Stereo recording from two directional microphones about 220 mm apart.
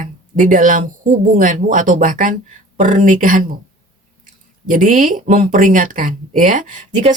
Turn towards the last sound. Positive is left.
turn(degrees=-35)  # may be behind; listen again after turning